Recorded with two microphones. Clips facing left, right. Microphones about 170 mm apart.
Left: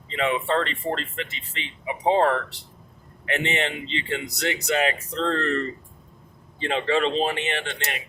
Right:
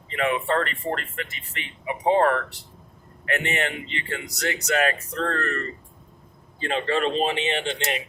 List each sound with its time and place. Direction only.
0.1 s speech: 20° left (ahead or behind)
6.8 s speech: centre (ahead or behind)
7.3 s speech: 25° right (ahead or behind)